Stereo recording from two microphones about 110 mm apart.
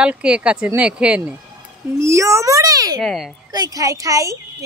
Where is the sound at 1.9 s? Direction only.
25° right (ahead or behind).